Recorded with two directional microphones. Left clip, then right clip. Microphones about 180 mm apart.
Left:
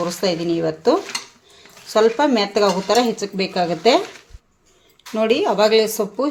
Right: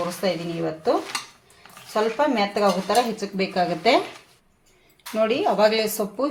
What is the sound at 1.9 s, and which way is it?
Speech, 55° left (ahead or behind).